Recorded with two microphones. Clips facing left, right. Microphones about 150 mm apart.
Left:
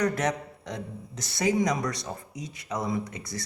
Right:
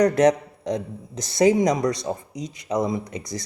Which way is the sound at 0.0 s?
40° right (ahead or behind).